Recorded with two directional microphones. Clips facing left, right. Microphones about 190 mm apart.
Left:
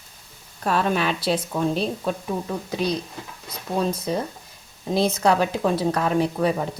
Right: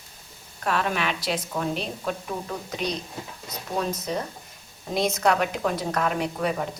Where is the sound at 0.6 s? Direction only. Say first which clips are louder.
Left 4 dB; 35° left (ahead or behind).